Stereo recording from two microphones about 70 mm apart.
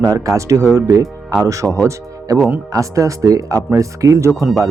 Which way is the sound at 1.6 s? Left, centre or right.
Centre.